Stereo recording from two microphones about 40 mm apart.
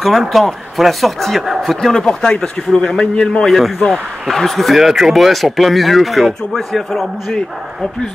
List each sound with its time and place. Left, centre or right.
0.0 s speech: centre
2.0 s a man's voice: centre
3.4 s speech: centre
7.3 s a man's voice: centre